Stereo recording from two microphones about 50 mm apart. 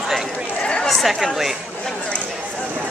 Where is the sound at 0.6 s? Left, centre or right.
Centre.